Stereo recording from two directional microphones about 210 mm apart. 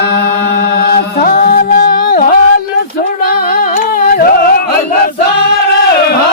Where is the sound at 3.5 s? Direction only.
45° left (ahead or behind).